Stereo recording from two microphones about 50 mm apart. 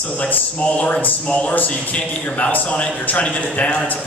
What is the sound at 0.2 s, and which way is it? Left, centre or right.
A man's voice, left.